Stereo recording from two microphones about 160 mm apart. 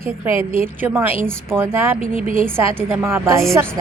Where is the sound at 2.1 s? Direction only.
60° right (ahead or behind).